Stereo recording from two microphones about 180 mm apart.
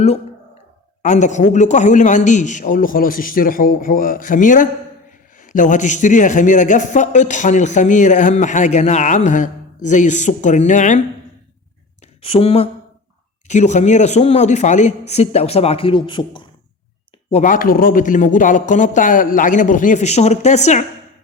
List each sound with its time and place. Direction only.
1.0 s a man's voice: 45° left (ahead or behind)
12.2 s speech: 30° left (ahead or behind)
17.3 s a man's voice: 45° left (ahead or behind)